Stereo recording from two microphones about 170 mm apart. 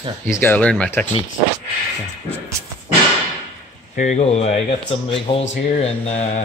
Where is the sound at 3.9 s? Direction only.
45° left (ahead or behind).